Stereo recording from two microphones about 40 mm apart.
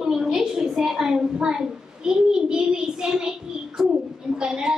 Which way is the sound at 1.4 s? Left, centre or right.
Centre.